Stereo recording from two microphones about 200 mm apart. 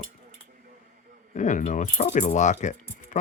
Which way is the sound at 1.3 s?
40° left (ahead or behind).